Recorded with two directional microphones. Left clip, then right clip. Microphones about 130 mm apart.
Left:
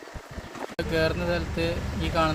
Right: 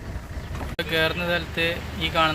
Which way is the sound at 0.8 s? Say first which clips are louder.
Right 3 dB; centre (ahead or behind).